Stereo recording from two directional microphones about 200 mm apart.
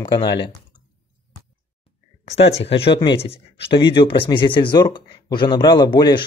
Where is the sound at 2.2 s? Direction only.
30° left (ahead or behind).